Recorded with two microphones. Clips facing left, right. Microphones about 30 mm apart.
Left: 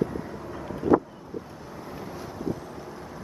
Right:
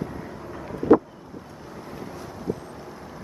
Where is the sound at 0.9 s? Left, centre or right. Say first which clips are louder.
Right 4 dB; right.